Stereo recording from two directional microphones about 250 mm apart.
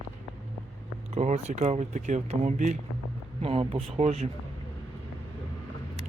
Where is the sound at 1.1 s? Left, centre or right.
Right.